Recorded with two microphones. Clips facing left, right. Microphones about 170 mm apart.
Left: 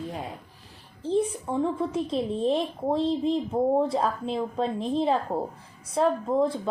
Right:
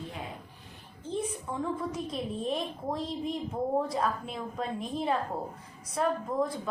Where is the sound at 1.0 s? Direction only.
30° left (ahead or behind).